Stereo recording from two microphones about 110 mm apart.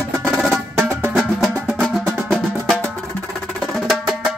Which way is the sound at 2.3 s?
5° left (ahead or behind).